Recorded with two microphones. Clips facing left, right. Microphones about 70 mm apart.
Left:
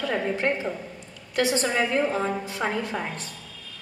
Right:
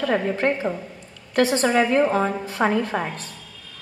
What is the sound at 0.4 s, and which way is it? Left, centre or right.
A woman's voice, right.